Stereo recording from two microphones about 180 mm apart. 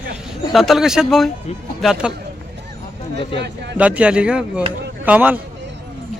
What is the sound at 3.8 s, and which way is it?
Speech, 10° right (ahead or behind).